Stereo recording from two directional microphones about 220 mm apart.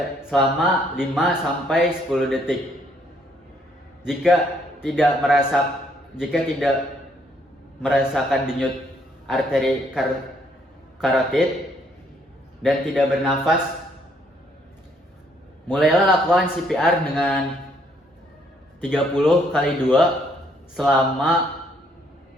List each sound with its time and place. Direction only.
0.3 s speech: centre (ahead or behind)
4.0 s speech: centre (ahead or behind)
7.8 s speech: centre (ahead or behind)
12.6 s speech: centre (ahead or behind)
15.7 s speech: 5° right (ahead or behind)
18.8 s speech: centre (ahead or behind)